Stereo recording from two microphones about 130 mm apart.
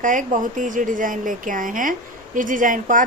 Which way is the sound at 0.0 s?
90° right.